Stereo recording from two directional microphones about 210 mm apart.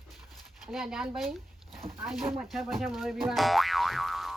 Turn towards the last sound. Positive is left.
turn(degrees=0)  # may be behind; listen again after turning